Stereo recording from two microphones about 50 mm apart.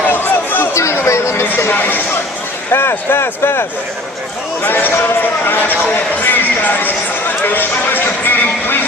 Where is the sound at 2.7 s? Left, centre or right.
Left.